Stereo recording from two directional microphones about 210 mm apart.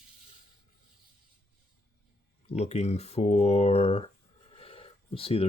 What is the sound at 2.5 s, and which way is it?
Speech, 30° left (ahead or behind).